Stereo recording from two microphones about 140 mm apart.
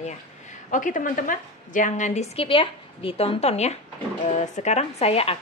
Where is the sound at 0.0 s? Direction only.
60° left (ahead or behind).